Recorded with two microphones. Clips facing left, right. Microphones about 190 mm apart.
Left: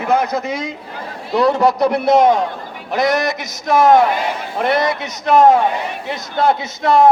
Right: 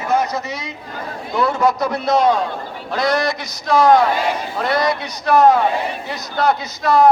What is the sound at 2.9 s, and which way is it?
A man's voice, 20° left (ahead or behind).